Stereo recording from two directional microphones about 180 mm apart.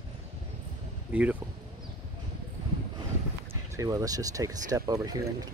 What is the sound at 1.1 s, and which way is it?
Speech, 5° right (ahead or behind).